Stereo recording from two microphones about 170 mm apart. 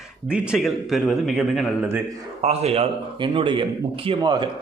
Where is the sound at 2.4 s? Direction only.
40° right (ahead or behind).